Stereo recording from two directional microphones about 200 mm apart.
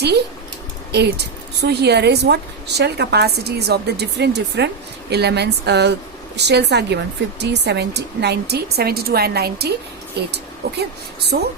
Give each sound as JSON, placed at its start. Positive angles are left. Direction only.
{"t": 0.9, "sound": "a woman's voice", "side_deg": -55}